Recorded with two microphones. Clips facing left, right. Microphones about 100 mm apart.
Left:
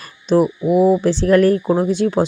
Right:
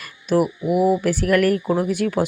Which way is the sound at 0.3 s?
25° left (ahead or behind).